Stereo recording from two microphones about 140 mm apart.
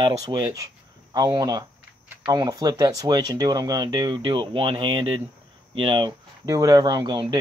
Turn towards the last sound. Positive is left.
turn(degrees=-30)  # may be behind; listen again after turning